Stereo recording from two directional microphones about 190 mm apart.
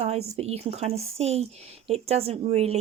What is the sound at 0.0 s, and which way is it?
Speech, 35° right (ahead or behind).